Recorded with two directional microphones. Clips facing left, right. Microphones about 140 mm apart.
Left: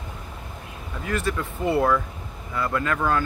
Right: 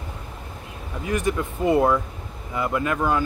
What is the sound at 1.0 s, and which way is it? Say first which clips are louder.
Speech: right 3 dB; 20° right (ahead or behind).